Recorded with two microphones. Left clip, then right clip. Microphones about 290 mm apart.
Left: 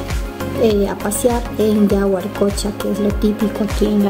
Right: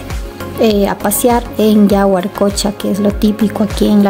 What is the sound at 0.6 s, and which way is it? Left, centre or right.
Speech, right.